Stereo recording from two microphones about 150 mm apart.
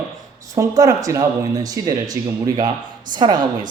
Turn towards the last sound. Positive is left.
turn(degrees=-30)  # may be behind; listen again after turning